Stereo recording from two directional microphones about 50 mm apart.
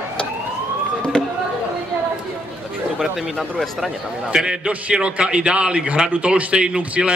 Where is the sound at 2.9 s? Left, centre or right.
Centre.